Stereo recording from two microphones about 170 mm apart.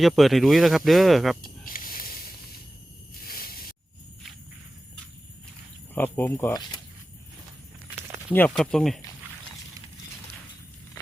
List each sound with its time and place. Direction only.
0.0 s speech: centre (ahead or behind)
1.4 s a sound: 55° left (ahead or behind)
5.9 s speech: 10° left (ahead or behind)
6.5 s speech: 25° left (ahead or behind)
8.3 s speech: 10° left (ahead or behind)